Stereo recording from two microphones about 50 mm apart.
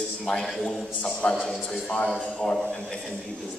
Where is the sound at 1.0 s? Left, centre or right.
Centre.